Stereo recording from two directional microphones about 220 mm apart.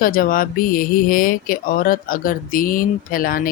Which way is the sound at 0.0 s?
40° left (ahead or behind).